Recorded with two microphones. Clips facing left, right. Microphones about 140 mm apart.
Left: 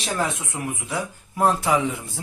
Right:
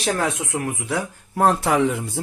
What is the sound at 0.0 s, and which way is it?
Speech, 75° right (ahead or behind).